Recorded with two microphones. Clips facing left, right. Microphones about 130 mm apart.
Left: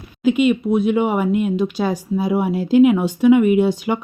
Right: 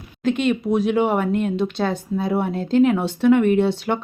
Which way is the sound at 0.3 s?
5° left (ahead or behind).